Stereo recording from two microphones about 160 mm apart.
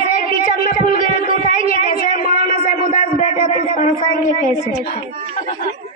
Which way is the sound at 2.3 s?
60° left (ahead or behind).